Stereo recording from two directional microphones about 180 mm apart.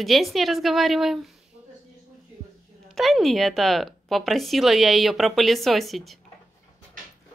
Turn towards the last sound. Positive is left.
turn(degrees=0)  # may be behind; listen again after turning